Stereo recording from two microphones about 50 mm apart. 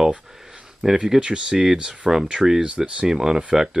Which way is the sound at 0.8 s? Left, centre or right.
Centre.